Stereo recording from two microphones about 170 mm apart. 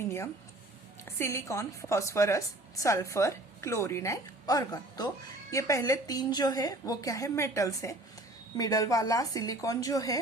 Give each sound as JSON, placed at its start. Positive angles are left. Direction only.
{"t": 1.0, "sound": "a woman's voice", "side_deg": 15}